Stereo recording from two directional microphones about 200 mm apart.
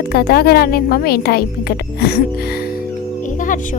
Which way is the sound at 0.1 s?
50° left (ahead or behind).